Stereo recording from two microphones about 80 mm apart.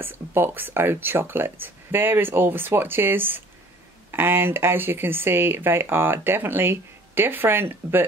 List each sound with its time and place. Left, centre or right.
0.0 s speech: right